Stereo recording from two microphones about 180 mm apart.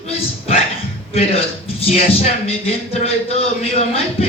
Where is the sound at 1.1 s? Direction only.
35° left (ahead or behind).